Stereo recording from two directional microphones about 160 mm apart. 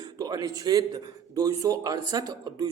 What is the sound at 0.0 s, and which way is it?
A man's voice, 25° right (ahead or behind).